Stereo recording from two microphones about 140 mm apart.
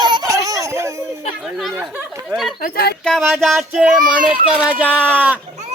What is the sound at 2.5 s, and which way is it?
Speech, 90° left.